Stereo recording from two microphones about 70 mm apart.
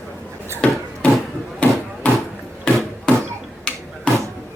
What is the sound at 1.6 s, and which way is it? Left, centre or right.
Hammer, left.